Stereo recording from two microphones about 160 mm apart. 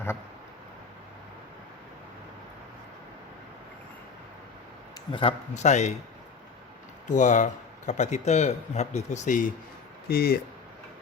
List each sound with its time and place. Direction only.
5.1 s speech: 40° left (ahead or behind)
7.1 s speech: 50° left (ahead or behind)
10.1 s speech: 75° left (ahead or behind)